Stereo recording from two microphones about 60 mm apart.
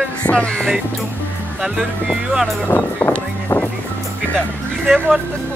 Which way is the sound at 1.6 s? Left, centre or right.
Centre.